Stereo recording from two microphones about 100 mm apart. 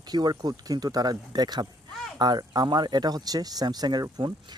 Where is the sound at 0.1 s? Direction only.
45° right (ahead or behind).